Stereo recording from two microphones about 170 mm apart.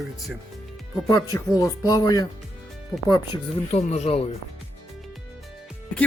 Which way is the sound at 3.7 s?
40° left (ahead or behind).